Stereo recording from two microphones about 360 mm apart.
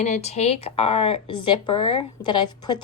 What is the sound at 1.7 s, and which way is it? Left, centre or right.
Speech, left.